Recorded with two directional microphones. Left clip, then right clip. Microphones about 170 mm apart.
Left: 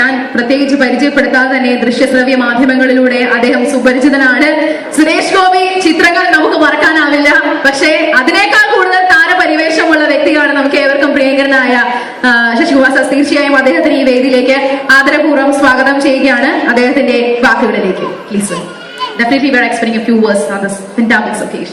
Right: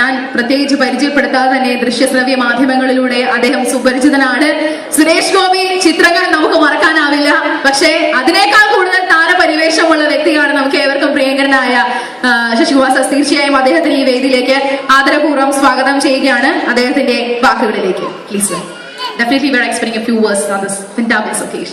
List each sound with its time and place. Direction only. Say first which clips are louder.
0.0 s a woman's voice: left 2 dB; 35° right (ahead or behind)
4.9 s a sound: even; 40° right (ahead or behind)
12.2 s a woman's voice: left 2 dB; 35° right (ahead or behind)
19.2 s a woman's voice: left 2 dB; 40° right (ahead or behind)